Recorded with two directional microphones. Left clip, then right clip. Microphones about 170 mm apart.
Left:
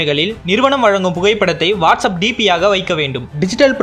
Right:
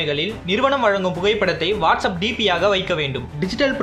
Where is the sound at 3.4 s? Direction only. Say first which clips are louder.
Left 8 dB; 40° left (ahead or behind).